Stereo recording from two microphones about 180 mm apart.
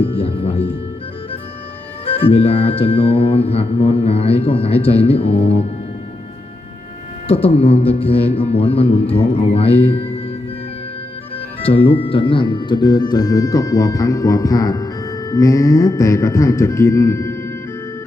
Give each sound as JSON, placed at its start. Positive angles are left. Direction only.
{"t": 0.0, "sound": "speech", "side_deg": 30}
{"t": 2.0, "sound": "music", "side_deg": 30}
{"t": 7.3, "sound": "music", "side_deg": 30}
{"t": 11.6, "sound": "speech", "side_deg": 30}